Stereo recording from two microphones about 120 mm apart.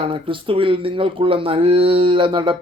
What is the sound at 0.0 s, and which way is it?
Speech, 45° right (ahead or behind).